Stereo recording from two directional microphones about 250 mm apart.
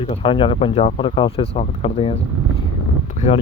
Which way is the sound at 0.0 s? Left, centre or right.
Left.